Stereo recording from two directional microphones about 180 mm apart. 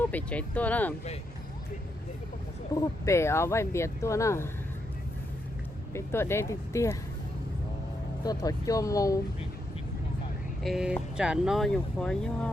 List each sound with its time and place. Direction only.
0.0 s speech: 10° left (ahead or behind)
2.7 s speech: 15° left (ahead or behind)
5.9 s speech: 15° left (ahead or behind)
8.2 s speech: 20° left (ahead or behind)
10.6 s speech: centre (ahead or behind)